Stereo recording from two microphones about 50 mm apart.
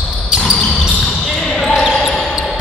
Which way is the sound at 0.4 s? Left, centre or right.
Centre.